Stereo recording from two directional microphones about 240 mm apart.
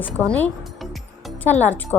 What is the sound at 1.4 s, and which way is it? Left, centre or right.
Speech, centre.